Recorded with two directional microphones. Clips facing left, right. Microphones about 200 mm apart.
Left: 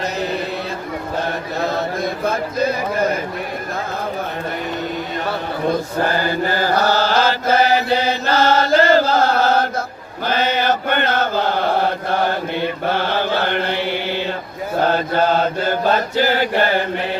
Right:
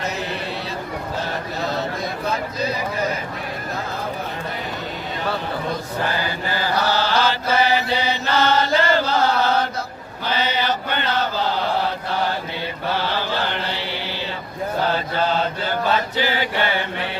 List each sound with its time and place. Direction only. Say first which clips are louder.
1.6 s speech: left 5 dB; 50° left (ahead or behind)
6.0 s mantra: left 6 dB; 45° left (ahead or behind)
10.2 s chant: left 4 dB; 50° left (ahead or behind)
14.8 s mantra: left 6 dB; 50° left (ahead or behind)